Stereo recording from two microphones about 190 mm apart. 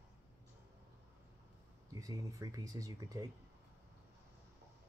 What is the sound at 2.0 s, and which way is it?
Speech, 20° right (ahead or behind).